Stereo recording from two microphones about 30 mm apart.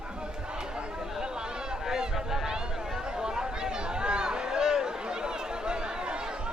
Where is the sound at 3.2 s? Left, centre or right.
Right.